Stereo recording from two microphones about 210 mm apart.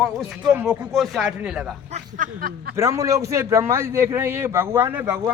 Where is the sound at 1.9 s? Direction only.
40° right (ahead or behind).